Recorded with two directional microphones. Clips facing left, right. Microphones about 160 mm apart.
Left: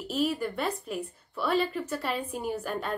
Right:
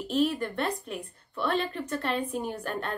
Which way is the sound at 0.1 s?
5° left (ahead or behind).